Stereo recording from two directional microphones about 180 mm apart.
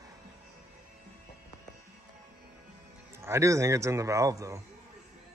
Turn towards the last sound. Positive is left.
turn(degrees=-15)  # may be behind; listen again after turning